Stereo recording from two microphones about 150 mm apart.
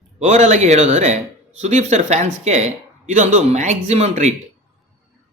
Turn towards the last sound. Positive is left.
turn(degrees=-45)  # may be behind; listen again after turning